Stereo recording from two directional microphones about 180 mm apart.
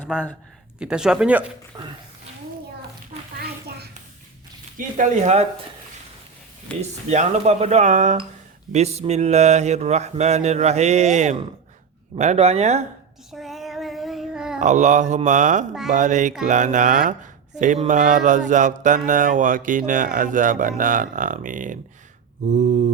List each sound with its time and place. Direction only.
0.8 s speech: 5° right (ahead or behind)
1.7 s speech: 25° right (ahead or behind)
3.3 s a sound: 55° right (ahead or behind)
4.8 s speech: 45° right (ahead or behind)
6.7 s speech: 5° left (ahead or behind)
7.1 s speech: 40° right (ahead or behind)
13.3 s child singing: centre (ahead or behind)
14.6 s speech: 40° right (ahead or behind)